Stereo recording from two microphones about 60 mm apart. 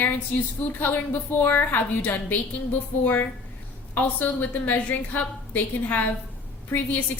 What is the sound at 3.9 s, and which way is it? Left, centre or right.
A woman's voice, left.